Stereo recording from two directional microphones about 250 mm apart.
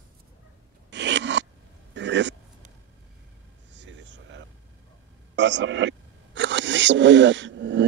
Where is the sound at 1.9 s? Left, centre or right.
Right.